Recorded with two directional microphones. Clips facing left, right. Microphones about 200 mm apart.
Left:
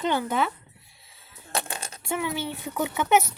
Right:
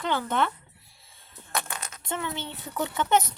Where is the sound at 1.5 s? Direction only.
30° left (ahead or behind).